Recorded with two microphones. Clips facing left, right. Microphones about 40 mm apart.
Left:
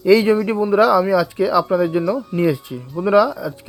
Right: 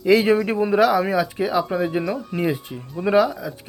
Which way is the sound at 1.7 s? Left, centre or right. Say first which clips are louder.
Left 5 dB; right.